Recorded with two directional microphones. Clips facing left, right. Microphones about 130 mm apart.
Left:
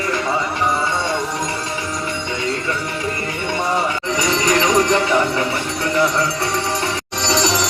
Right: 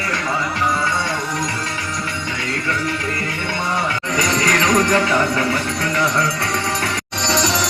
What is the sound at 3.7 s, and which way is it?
Speech, 10° left (ahead or behind).